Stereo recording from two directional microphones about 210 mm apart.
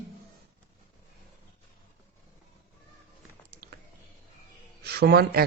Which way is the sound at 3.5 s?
50° right (ahead or behind).